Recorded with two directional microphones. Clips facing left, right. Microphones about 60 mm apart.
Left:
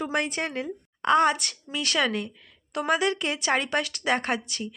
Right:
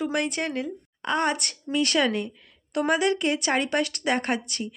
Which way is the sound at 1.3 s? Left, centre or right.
Right.